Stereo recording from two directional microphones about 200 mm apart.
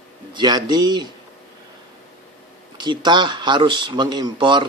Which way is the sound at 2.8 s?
20° right (ahead or behind).